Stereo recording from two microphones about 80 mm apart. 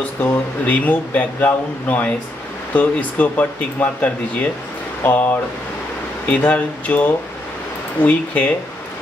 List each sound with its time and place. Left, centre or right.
0.7 s speech: centre